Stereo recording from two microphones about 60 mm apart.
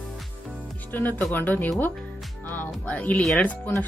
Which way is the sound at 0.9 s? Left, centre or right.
Left.